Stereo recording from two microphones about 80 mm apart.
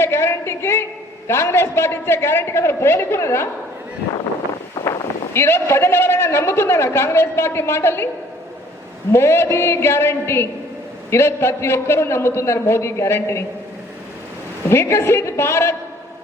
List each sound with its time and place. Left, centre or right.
0.0 s a sound: left
1.3 s a man's voice: left
4.7 s a sound: left
5.3 s a man's voice: left
9.1 s a man's voice: left
14.7 s a man's voice: left